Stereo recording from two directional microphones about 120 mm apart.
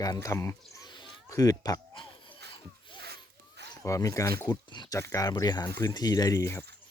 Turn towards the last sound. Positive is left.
turn(degrees=25)  # may be behind; listen again after turning